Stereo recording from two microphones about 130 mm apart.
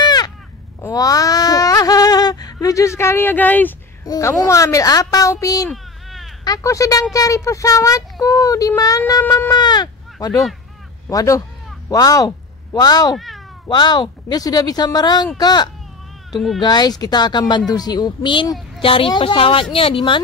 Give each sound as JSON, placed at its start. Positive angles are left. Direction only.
{"t": 0.0, "sound": "a sound", "side_deg": 30}
{"t": 4.0, "sound": "speech", "side_deg": 25}
{"t": 5.7, "sound": "a sound", "side_deg": 0}
{"t": 6.4, "sound": "speech", "side_deg": 25}
{"t": 9.2, "sound": "speech", "side_deg": 15}
{"t": 9.5, "sound": "speech", "side_deg": 35}
{"t": 13.1, "sound": "speech", "side_deg": 0}
{"t": 13.7, "sound": "speech", "side_deg": 35}
{"t": 16.3, "sound": "speech", "side_deg": 0}
{"t": 16.6, "sound": "a woman's voice", "side_deg": 30}